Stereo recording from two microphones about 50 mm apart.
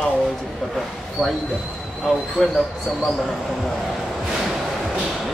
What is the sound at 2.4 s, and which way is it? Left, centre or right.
Speech, centre.